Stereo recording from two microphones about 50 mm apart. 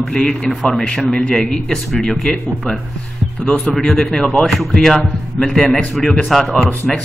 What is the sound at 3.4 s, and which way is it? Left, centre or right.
Speech, left.